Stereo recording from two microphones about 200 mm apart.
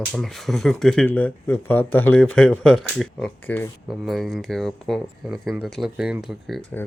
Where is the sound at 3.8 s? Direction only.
Centre (ahead or behind).